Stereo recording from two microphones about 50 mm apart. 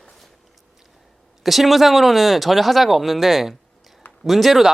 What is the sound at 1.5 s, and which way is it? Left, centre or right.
Speech, centre.